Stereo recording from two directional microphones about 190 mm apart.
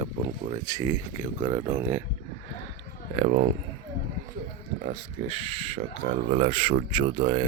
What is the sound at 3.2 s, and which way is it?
Speech, 45° right (ahead or behind).